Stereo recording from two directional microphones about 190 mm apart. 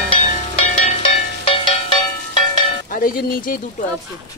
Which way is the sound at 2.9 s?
45° left (ahead or behind).